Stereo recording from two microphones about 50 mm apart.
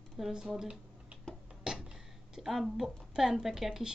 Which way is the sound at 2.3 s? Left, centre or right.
Centre.